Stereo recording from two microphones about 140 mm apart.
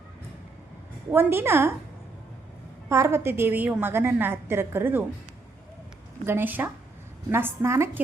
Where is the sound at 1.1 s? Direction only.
15° right (ahead or behind).